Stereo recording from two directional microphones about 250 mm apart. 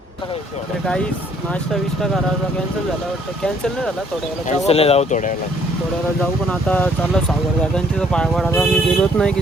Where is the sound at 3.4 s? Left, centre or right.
Centre.